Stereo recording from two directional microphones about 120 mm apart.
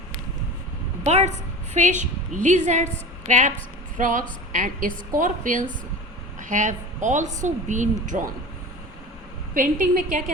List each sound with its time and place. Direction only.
1.0 s a woman's voice: 65° right (ahead or behind)
1.7 s a woman's voice: 90° right
9.7 s a woman's voice: 90° right